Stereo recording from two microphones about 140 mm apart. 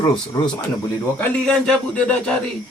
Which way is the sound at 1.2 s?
10° left (ahead or behind).